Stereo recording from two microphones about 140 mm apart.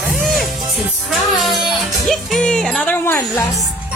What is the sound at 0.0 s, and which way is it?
Music, centre (ahead or behind).